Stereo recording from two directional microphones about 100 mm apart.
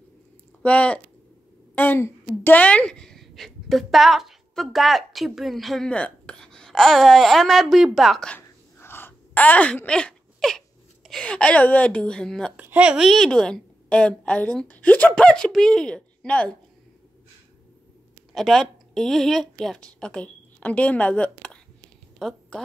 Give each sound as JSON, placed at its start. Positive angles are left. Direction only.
{"t": 0.6, "sound": "speech", "side_deg": 15}
{"t": 8.4, "sound": "a sound", "side_deg": 25}
{"t": 11.1, "sound": "a woman's voice", "side_deg": 10}
{"t": 12.5, "sound": "a woman's voice", "side_deg": -15}
{"t": 18.3, "sound": "speech", "side_deg": 5}